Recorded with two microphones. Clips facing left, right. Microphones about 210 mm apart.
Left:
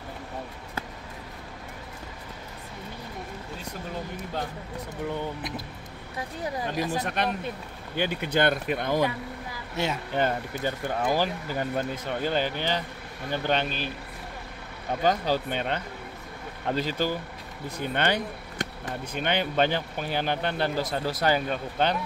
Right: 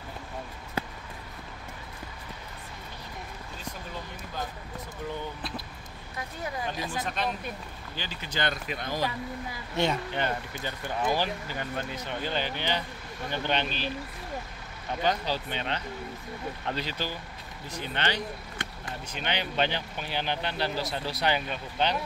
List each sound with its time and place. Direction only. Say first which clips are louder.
6.1 s speech: left 3 dB; 35° left (ahead or behind)
7.0 s speech: left 3 dB; 65° left (ahead or behind)
9.8 s speech: right 2 dB; 5° left (ahead or behind)
10.1 s speech: left 4 dB; 40° left (ahead or behind)
15.0 s speech: left 4 dB; 45° left (ahead or behind)